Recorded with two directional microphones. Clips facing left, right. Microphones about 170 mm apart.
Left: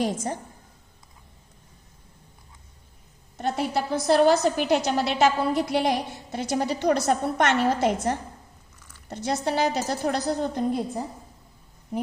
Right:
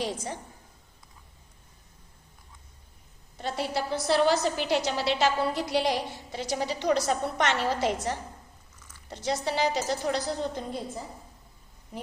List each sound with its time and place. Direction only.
0.0 s a woman's voice: 45° left (ahead or behind)
3.3 s a woman's voice: 55° left (ahead or behind)